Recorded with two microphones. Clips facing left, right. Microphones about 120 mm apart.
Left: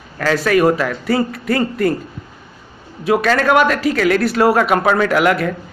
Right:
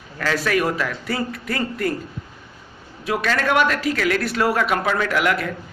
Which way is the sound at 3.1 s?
85° left.